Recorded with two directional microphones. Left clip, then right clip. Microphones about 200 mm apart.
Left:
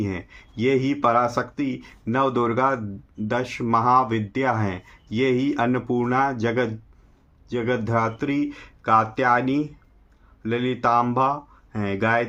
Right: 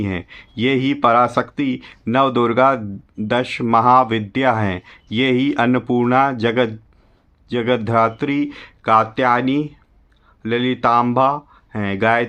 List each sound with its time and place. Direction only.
0.0 s speech: 45° right (ahead or behind)